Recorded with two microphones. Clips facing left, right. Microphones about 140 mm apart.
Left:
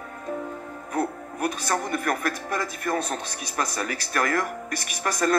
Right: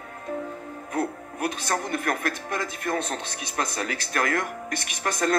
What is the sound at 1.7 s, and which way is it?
A man's voice, 45° left (ahead or behind).